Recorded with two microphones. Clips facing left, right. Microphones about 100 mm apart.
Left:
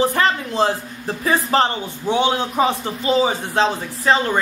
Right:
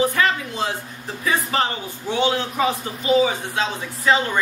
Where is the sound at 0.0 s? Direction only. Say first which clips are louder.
Left 2 dB; 35° left (ahead or behind).